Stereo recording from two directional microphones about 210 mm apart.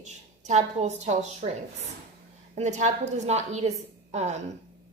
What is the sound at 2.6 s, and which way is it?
A woman's voice, 35° right (ahead or behind).